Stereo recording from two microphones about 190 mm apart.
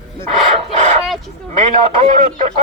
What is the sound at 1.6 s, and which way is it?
Speech, 40° right (ahead or behind).